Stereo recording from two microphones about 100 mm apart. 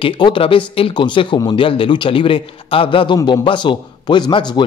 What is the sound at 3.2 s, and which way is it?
A man's voice, 50° left (ahead or behind).